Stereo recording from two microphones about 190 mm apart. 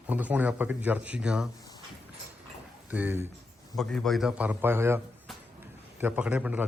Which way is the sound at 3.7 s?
5° left (ahead or behind).